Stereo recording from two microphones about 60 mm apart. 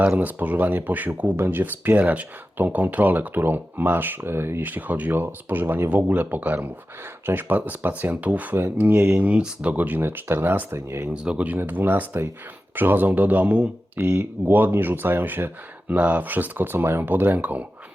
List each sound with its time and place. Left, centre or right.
0.2 s speech: right
9.1 s speech: centre
10.7 s speech: right
11.1 s speech: centre
14.0 s speech: right